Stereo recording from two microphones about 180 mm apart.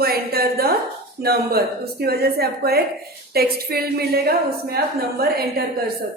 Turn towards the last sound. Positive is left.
turn(degrees=-60)  # may be behind; listen again after turning